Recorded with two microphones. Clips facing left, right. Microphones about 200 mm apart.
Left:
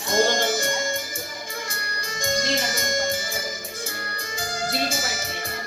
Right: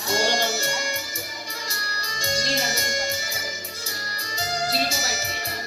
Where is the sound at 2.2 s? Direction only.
50° left (ahead or behind).